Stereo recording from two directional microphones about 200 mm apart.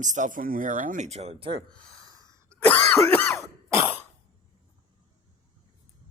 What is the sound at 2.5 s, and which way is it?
Throat clearing, 10° left (ahead or behind).